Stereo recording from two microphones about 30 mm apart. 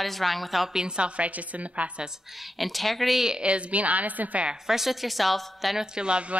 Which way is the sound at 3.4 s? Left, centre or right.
Right.